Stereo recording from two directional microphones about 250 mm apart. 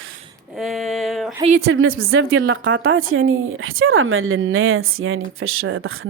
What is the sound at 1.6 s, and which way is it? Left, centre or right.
A woman's voice, right.